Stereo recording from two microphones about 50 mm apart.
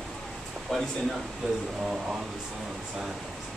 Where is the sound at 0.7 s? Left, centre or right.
Centre.